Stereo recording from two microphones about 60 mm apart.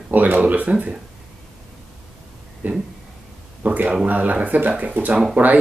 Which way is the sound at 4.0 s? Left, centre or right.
Right.